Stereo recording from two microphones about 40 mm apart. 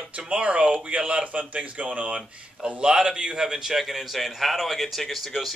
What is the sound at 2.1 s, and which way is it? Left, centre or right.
Speech, right.